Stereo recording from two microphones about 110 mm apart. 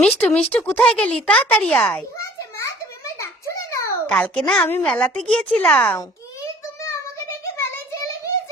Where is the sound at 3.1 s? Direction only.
25° left (ahead or behind).